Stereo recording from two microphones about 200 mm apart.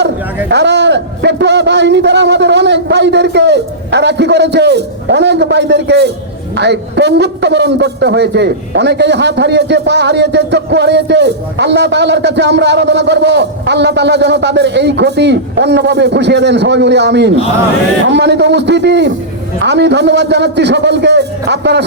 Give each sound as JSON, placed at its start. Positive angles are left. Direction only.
{"t": 0.5, "sound": "a man's voice", "side_deg": -60}